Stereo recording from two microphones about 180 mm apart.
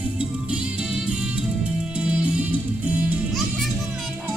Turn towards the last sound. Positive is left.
turn(degrees=-10)  # may be behind; listen again after turning